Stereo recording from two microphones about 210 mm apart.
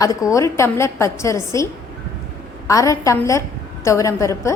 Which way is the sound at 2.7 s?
15° left (ahead or behind).